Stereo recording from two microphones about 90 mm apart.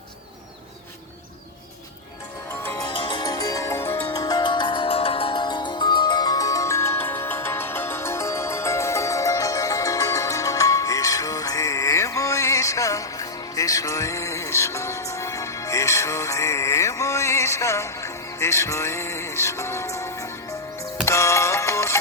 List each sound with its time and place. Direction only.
2.8 s music: 65° left (ahead or behind)
3.2 s music: 40° left (ahead or behind)
4.1 s music: 45° left (ahead or behind)